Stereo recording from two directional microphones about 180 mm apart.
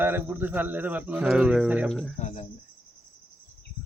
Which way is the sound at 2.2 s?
40° left (ahead or behind).